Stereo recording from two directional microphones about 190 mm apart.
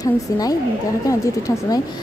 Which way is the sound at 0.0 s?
20° left (ahead or behind).